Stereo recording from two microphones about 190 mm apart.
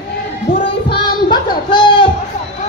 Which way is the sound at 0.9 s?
25° left (ahead or behind).